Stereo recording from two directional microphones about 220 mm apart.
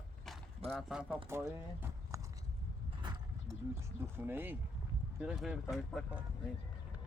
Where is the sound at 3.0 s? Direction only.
20° right (ahead or behind).